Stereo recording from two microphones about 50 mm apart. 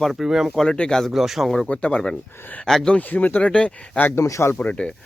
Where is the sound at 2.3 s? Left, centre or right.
Left.